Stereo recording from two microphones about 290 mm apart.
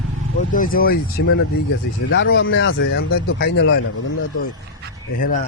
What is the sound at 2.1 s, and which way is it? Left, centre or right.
Speech, left.